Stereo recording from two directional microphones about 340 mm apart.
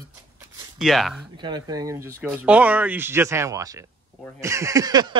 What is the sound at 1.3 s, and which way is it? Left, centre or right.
Speech, centre.